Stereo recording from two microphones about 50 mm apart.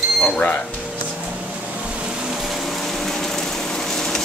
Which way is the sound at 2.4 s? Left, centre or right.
Centre.